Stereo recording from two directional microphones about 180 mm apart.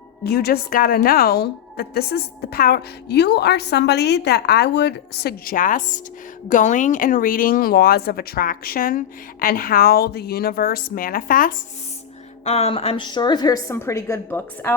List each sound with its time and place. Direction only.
0.3 s a woman's voice: 60° left (ahead or behind)
12.5 s a woman's voice: 35° left (ahead or behind); by 14.7 s 10° left (ahead or behind)